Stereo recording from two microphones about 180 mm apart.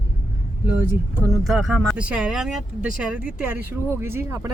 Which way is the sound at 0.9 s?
10° right (ahead or behind).